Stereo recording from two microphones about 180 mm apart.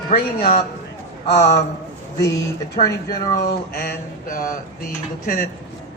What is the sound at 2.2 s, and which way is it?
Speech, 20° left (ahead or behind).